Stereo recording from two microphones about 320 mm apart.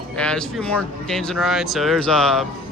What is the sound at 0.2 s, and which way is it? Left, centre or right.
Speech, centre.